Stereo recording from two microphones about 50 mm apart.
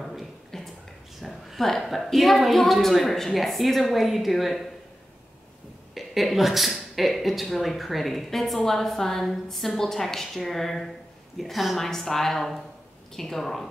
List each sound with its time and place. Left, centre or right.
0.0 s a sound: centre
1.7 s a woman's voice: centre
5.9 s a woman's voice: centre